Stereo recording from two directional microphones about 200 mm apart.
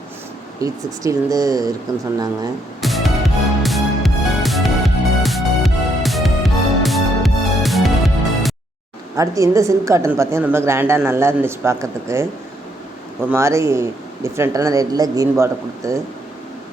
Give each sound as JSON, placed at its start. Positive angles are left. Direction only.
{"t": 0.6, "sound": "a woman's voice", "side_deg": -15}
{"t": 2.8, "sound": "music", "side_deg": 0}
{"t": 9.1, "sound": "a woman's voice", "side_deg": -15}